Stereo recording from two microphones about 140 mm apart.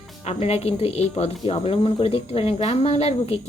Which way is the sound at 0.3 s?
45° left (ahead or behind).